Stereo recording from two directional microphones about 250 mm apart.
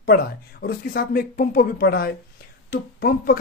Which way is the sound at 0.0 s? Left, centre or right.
Left.